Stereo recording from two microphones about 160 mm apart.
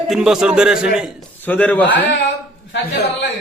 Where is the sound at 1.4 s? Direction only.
10° left (ahead or behind).